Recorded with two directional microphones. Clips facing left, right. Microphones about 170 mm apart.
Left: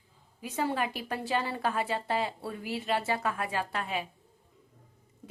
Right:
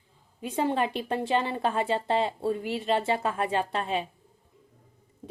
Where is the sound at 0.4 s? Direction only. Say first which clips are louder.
Right 4 dB; 25° right (ahead or behind).